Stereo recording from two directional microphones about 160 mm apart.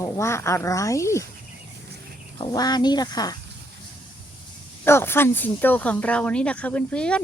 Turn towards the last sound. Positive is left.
turn(degrees=5)  # may be behind; listen again after turning